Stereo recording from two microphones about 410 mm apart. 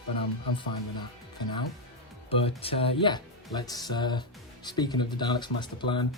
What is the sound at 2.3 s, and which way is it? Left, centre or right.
Speech, centre.